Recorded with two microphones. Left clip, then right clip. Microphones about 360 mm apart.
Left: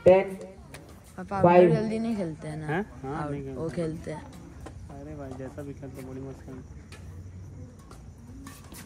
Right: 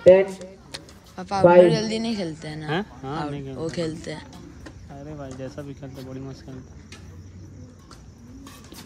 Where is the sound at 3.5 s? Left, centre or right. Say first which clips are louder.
Right 5 dB; centre.